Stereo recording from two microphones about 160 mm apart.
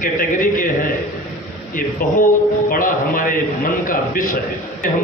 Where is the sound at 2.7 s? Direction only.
60° left (ahead or behind).